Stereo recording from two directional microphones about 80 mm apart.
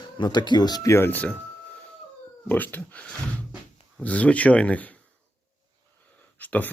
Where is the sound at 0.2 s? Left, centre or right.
Left.